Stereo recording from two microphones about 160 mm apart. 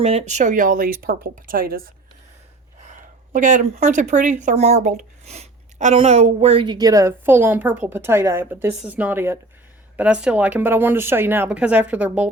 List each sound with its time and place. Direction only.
0.0 s speech: 40° right (ahead or behind); by 1.9 s 65° right (ahead or behind)
2.8 s a sound: 50° right (ahead or behind)
4.1 s a woman's voice: 50° right (ahead or behind); by 12.3 s 10° right (ahead or behind)